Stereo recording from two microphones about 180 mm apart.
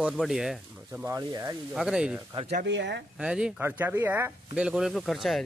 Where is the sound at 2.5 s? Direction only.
75° right (ahead or behind).